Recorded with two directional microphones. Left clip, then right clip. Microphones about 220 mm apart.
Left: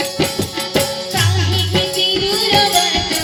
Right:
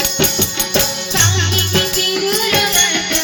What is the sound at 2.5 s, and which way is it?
Music, 55° left (ahead or behind).